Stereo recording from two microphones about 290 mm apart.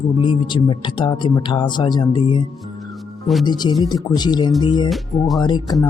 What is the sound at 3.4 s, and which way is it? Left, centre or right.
Speech, centre.